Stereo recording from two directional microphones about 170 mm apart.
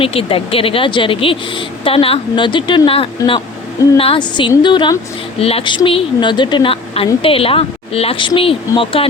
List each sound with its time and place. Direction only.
0.0 s a woman's voice: 35° left (ahead or behind)